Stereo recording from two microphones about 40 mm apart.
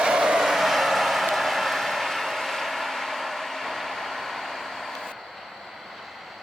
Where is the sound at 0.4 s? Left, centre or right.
Centre.